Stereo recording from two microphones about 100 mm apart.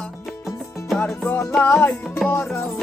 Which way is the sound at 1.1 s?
25° left (ahead or behind).